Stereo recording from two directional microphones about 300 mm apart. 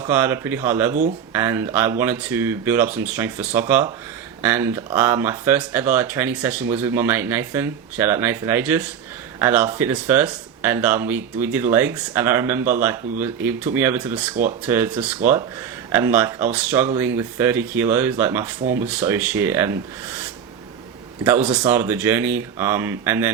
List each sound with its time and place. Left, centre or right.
0.1 s speech: centre